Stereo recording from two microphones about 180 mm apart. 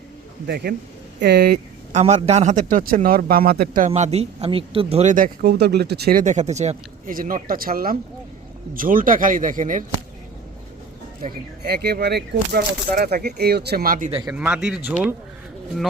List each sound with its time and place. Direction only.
0.4 s speech: 60° right (ahead or behind)
1.9 s speech: 40° right (ahead or behind); by 3.8 s 55° right (ahead or behind)
3.8 s speech: 40° right (ahead or behind)
11.2 s speech: 55° right (ahead or behind)
14.1 s a man's voice: 20° right (ahead or behind)
14.3 s speech: 5° right (ahead or behind)